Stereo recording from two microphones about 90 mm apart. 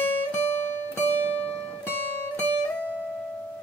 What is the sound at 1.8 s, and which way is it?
Music, 25° left (ahead or behind).